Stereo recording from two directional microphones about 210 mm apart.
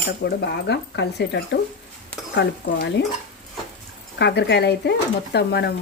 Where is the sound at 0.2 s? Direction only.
55° left (ahead or behind).